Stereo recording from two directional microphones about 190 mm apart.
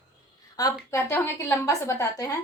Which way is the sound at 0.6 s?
20° left (ahead or behind).